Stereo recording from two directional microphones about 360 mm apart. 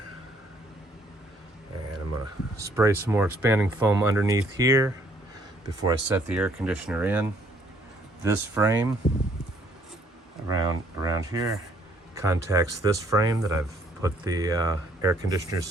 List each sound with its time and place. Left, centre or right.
2.6 s speech: centre
10.5 s speech: centre